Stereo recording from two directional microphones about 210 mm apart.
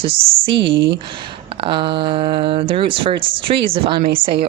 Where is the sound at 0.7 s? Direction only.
60° right (ahead or behind).